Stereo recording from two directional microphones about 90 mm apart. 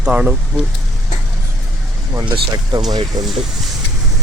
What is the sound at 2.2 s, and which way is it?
Speech, 55° right (ahead or behind).